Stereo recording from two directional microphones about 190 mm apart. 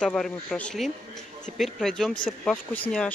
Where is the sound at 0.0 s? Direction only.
5° left (ahead or behind).